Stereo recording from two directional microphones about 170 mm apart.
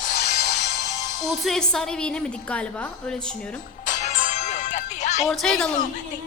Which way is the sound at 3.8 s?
45° left (ahead or behind).